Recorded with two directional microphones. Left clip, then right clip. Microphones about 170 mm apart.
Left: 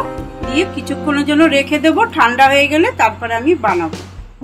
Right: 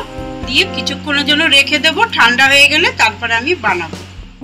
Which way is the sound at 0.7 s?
60° left (ahead or behind).